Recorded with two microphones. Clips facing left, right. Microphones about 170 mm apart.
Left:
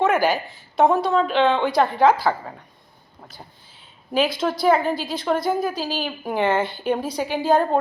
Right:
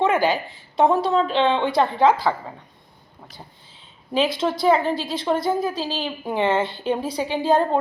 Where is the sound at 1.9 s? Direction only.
25° right (ahead or behind).